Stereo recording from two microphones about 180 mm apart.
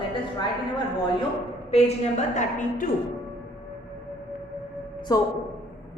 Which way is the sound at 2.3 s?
40° left (ahead or behind).